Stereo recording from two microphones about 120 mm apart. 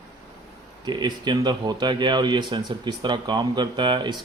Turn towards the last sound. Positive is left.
turn(degrees=-40)  # may be behind; listen again after turning